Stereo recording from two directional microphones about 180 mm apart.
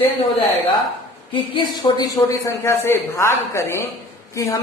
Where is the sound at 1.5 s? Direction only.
20° left (ahead or behind).